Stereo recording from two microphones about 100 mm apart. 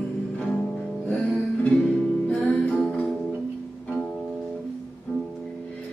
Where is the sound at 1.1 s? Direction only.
10° left (ahead or behind).